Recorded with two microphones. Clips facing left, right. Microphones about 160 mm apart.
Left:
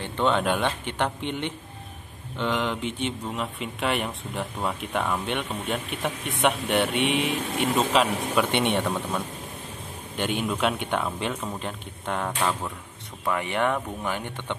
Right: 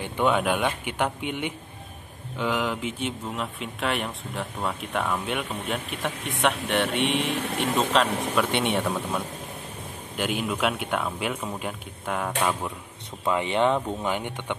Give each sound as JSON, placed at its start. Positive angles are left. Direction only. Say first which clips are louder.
{"t": 0.0, "sound": "speech", "louder": "even", "side_deg": -10}
{"t": 13.2, "sound": "speech", "louder": "right 3 dB", "side_deg": -20}